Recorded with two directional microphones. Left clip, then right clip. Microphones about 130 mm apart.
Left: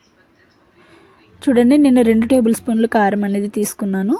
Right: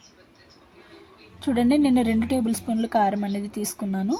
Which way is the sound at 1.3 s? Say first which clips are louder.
Left 9 dB; 35° left (ahead or behind).